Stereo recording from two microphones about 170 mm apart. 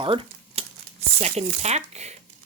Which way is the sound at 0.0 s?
30° right (ahead or behind).